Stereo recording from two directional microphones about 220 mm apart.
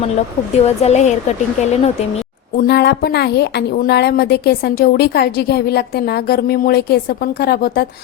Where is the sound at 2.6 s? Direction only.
50° left (ahead or behind).